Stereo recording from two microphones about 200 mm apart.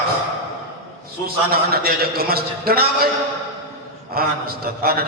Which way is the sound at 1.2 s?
50° right (ahead or behind).